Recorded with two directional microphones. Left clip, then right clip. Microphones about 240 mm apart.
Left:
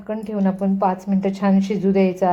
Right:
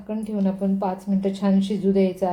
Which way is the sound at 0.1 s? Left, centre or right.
Centre.